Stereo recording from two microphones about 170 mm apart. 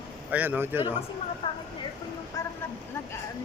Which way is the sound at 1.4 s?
30° left (ahead or behind).